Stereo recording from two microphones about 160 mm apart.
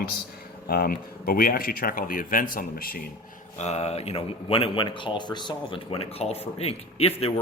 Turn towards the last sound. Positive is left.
turn(degrees=35)  # may be behind; listen again after turning